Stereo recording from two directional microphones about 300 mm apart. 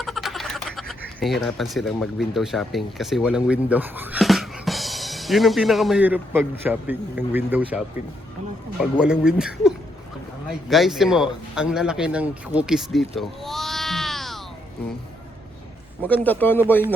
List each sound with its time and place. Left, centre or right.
0.0 s speech: centre
8.8 s speech: centre
16.0 s speech: centre